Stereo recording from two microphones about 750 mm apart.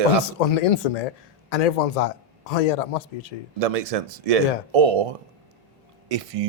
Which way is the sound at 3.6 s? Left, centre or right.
Right.